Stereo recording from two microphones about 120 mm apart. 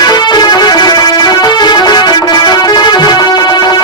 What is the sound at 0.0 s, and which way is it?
Music, 35° left (ahead or behind).